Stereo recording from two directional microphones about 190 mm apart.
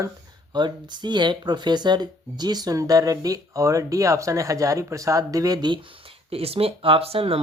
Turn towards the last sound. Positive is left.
turn(degrees=-30)  # may be behind; listen again after turning